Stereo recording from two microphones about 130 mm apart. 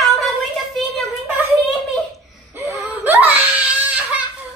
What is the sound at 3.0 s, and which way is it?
Crying, 15° right (ahead or behind).